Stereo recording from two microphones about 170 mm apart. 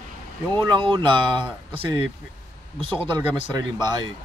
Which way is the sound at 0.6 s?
30° right (ahead or behind).